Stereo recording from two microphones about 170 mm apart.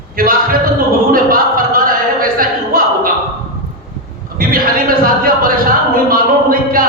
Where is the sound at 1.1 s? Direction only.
55° right (ahead or behind).